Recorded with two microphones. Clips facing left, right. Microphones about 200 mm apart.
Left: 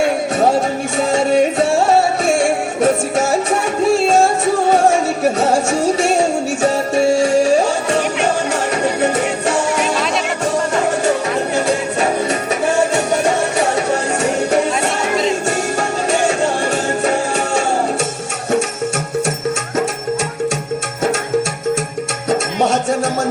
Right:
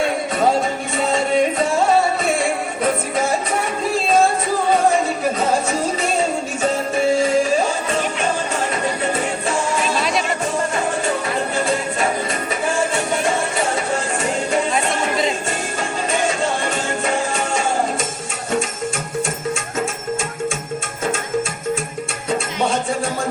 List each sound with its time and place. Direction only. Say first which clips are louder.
0.0 s music: left 4 dB; 70° left (ahead or behind)
4.7 s music: left 1 dB; 75° left (ahead or behind)
11.5 s music: left 4 dB; 70° left (ahead or behind)
13.2 s music: left 4 dB; 70° left (ahead or behind)
17.3 s music: left 4 dB; 70° left (ahead or behind)
22.3 s music: left 5 dB; 70° left (ahead or behind)